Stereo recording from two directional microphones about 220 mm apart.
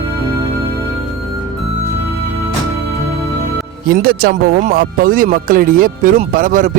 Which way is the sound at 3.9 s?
40° right (ahead or behind).